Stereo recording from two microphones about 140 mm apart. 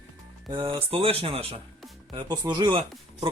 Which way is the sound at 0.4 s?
35° right (ahead or behind).